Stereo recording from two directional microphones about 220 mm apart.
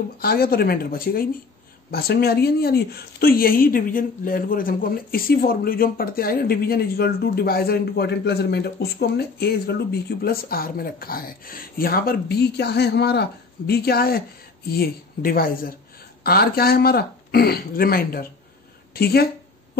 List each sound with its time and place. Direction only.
0.2 s speech: 45° left (ahead or behind)